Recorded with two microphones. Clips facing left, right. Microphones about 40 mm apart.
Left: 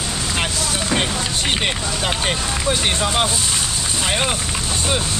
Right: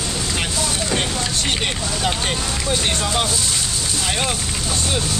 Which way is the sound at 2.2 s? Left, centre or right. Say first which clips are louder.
Left 2 dB; centre.